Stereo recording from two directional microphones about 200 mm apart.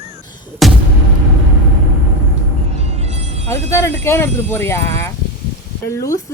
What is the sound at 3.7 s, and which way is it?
A woman's voice, 15° left (ahead or behind).